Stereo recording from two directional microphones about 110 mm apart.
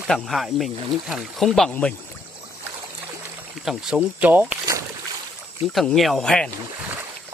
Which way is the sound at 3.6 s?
5° right (ahead or behind).